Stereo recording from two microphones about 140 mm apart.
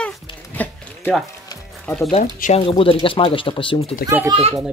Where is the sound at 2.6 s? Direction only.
40° left (ahead or behind).